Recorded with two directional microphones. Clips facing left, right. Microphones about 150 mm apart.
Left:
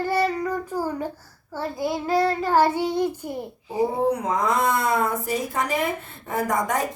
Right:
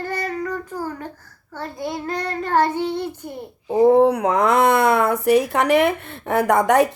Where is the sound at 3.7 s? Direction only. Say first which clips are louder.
Right 9 dB; 65° right (ahead or behind).